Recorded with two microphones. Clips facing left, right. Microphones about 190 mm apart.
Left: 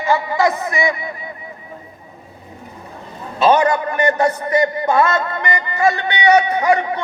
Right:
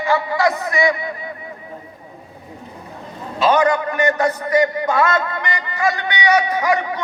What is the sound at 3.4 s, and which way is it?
A man's voice, 25° left (ahead or behind).